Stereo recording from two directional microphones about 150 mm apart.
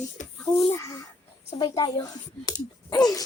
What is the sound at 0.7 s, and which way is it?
Speech, 20° left (ahead or behind).